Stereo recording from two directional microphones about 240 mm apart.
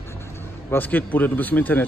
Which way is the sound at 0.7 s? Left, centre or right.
Centre.